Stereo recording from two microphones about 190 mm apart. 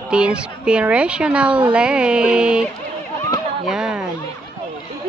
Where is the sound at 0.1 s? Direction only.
5° right (ahead or behind).